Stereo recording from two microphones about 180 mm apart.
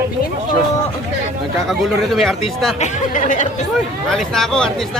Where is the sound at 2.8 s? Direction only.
40° left (ahead or behind).